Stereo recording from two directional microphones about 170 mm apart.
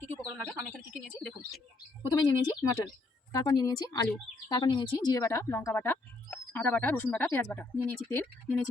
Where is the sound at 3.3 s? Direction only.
25° left (ahead or behind).